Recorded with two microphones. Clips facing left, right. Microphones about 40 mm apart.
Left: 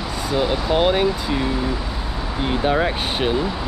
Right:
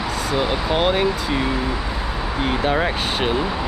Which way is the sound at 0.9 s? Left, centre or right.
Centre.